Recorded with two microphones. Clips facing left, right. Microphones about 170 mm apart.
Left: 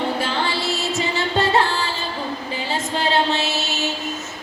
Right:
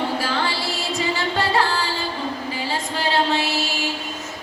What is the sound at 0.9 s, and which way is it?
Singing, 25° left (ahead or behind).